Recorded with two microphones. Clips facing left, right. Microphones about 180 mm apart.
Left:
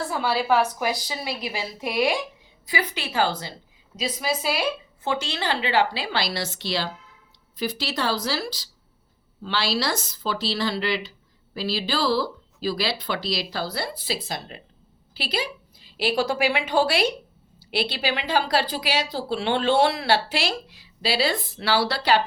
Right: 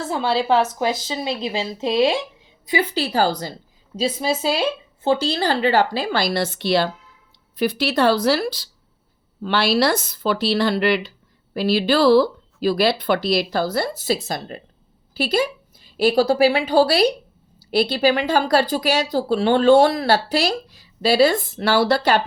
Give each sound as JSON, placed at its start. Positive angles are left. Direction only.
{"t": 0.0, "sound": "a woman's voice", "side_deg": -25}
{"t": 3.9, "sound": "a woman's voice", "side_deg": -30}